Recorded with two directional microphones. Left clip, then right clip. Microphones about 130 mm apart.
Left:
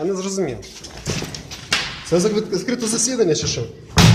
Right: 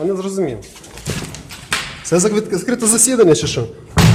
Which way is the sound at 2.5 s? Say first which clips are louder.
Right 4 dB; 80° right.